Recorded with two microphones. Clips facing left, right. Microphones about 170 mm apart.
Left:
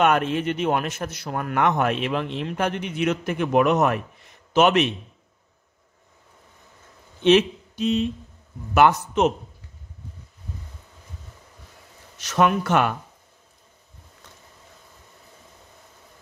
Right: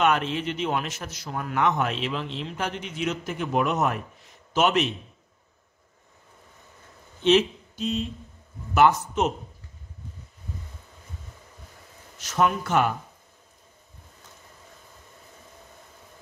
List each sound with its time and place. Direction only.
0.0 s speech: 50° left (ahead or behind)
7.2 s speech: 65° left (ahead or behind)
12.2 s speech: 75° left (ahead or behind)